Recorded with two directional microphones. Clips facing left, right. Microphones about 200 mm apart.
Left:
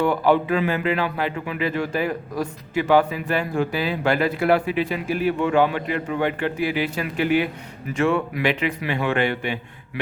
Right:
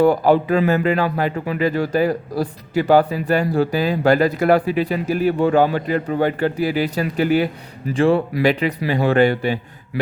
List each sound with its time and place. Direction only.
0.0 s speech: 40° right (ahead or behind)